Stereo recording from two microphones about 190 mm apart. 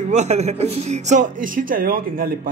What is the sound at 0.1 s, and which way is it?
Speech, 35° right (ahead or behind).